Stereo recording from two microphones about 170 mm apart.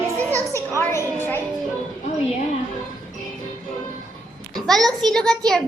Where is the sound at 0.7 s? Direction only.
15° left (ahead or behind).